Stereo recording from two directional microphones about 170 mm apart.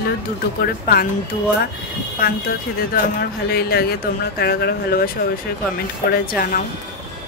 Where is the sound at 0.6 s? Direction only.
65° left (ahead or behind).